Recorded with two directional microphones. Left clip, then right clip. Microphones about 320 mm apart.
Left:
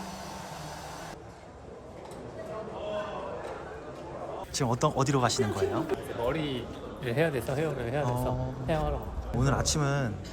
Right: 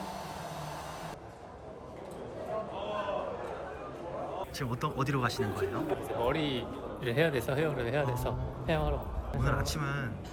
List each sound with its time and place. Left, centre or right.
4.5 s a man's voice: centre